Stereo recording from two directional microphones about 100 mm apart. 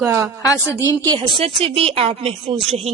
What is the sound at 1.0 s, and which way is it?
Speech, 45° right (ahead or behind).